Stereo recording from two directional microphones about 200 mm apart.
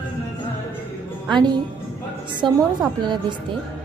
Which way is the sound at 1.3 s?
20° right (ahead or behind).